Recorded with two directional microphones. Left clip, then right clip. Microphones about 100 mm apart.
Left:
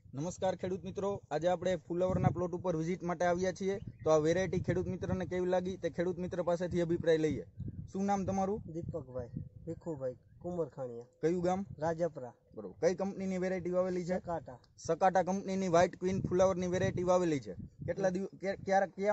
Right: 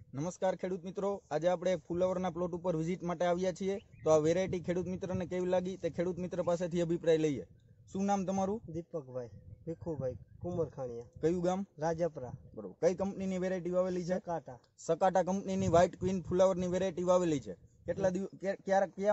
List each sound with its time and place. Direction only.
0.1 s a man's voice: 20° left (ahead or behind)
8.7 s a man's voice: 25° right (ahead or behind)
11.1 s a man's voice: 20° left (ahead or behind)
11.8 s a man's voice: 30° right (ahead or behind)
12.5 s a man's voice: 25° left (ahead or behind)
14.9 s a man's voice: 25° left (ahead or behind)